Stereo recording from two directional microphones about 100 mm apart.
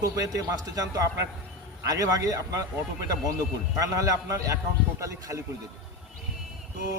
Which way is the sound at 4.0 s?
35° right (ahead or behind).